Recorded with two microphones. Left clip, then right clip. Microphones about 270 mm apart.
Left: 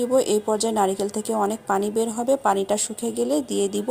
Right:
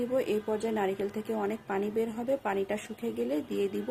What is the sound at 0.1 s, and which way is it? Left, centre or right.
A woman's voice, left.